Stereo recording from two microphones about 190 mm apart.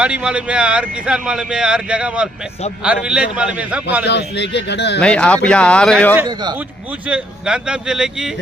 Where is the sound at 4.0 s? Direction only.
65° left (ahead or behind).